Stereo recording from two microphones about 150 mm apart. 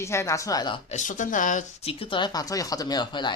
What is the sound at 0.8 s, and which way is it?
Speech, 55° left (ahead or behind).